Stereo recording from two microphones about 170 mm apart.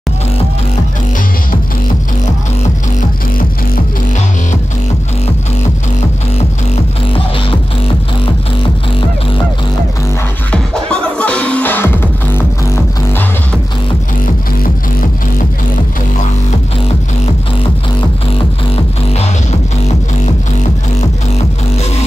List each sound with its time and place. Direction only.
10.5 s music: 5° left (ahead or behind)
14.2 s music: 55° left (ahead or behind)